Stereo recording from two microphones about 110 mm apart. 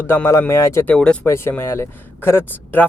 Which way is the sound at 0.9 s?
10° left (ahead or behind).